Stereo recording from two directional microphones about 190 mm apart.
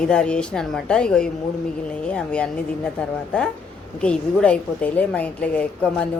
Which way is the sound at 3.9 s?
5° left (ahead or behind).